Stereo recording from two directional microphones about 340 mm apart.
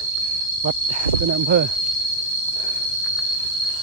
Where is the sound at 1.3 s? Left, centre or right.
Right.